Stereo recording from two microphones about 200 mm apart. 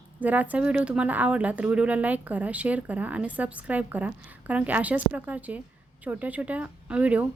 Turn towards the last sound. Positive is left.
turn(degrees=-5)  # may be behind; listen again after turning